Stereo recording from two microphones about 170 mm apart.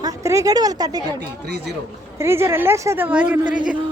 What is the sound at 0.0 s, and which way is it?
A woman's voice, 20° right (ahead or behind).